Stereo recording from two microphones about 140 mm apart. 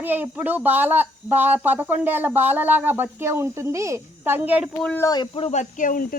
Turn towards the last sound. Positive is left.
turn(degrees=80)